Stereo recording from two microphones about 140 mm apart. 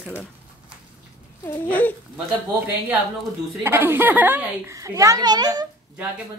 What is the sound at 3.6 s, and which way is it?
A woman's voice, 15° right (ahead or behind).